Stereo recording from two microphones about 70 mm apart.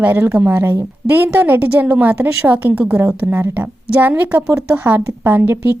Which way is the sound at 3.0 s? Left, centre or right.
Right.